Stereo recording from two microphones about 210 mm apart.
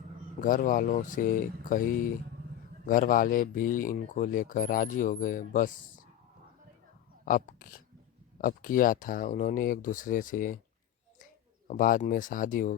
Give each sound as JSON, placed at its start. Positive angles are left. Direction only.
{"t": 0.4, "sound": "speech", "side_deg": 40}
{"t": 7.3, "sound": "speech", "side_deg": 40}
{"t": 11.7, "sound": "speech", "side_deg": 40}